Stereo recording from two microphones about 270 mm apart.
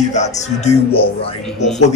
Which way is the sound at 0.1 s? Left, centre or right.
Left.